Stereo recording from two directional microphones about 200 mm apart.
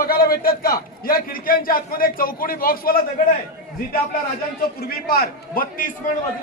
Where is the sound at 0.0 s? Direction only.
45° left (ahead or behind).